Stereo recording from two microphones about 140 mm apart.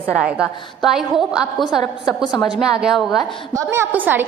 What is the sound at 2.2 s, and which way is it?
Speech, 30° left (ahead or behind).